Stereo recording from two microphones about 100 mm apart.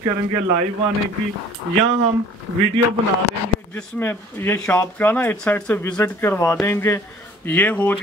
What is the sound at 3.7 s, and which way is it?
Speech, 20° left (ahead or behind).